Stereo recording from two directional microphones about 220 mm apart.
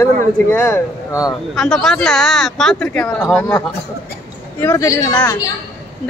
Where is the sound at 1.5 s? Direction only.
Centre (ahead or behind).